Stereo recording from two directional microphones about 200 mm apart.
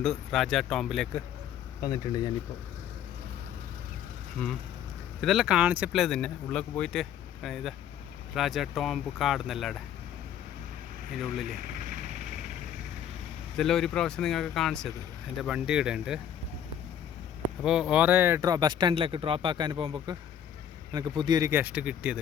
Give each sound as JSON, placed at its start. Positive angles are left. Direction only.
{"t": 0.0, "sound": "speech", "side_deg": 0}
{"t": 1.8, "sound": "speech", "side_deg": 20}
{"t": 5.2, "sound": "speech", "side_deg": 0}
{"t": 13.6, "sound": "speech", "side_deg": 0}
{"t": 17.6, "sound": "speech", "side_deg": -5}